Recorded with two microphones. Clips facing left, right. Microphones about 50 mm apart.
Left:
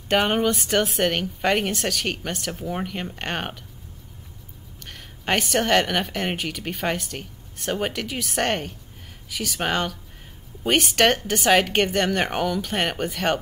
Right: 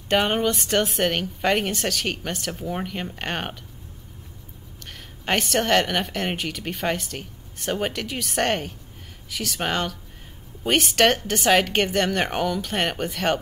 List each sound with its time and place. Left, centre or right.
0.1 s a woman's voice: centre
5.2 s a woman's voice: centre